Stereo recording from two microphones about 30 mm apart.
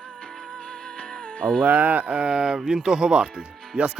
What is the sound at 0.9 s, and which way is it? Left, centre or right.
Music, left.